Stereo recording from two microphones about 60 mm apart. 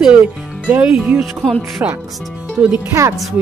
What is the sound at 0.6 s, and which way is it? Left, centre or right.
Speech, right.